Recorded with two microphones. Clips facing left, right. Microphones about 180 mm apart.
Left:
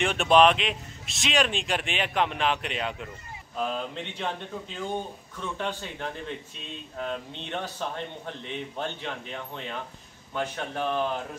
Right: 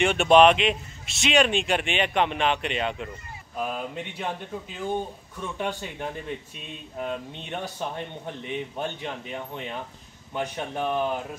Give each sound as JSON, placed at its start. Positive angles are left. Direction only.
{"t": 0.0, "sound": "a man's voice", "side_deg": 0}